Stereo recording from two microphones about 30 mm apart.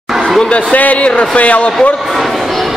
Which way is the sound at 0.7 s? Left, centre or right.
Left.